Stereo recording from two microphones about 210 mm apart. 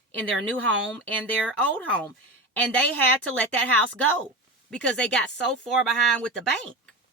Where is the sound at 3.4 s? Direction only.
5° left (ahead or behind).